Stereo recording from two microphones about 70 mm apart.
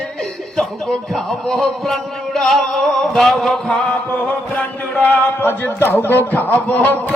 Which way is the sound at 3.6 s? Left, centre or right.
Centre.